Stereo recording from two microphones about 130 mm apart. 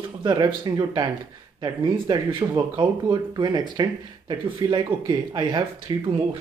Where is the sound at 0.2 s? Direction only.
35° right (ahead or behind).